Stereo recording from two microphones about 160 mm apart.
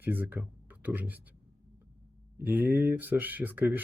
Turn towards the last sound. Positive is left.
turn(degrees=-10)  # may be behind; listen again after turning